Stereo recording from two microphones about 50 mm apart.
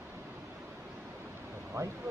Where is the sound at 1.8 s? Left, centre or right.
Right.